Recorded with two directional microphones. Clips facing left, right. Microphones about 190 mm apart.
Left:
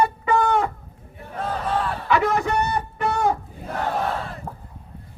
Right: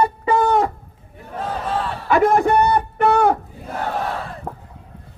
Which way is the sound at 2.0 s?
50° right (ahead or behind).